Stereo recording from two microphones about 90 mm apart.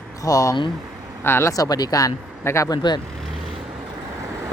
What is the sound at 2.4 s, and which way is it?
Speech, 30° left (ahead or behind).